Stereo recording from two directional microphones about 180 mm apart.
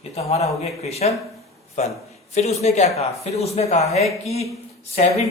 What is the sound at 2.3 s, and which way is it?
Speech, 35° left (ahead or behind).